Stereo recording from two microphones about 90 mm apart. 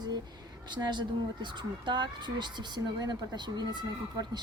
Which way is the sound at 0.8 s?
55° right (ahead or behind).